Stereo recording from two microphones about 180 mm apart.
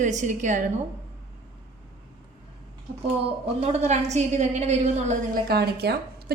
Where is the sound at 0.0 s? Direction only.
45° right (ahead or behind).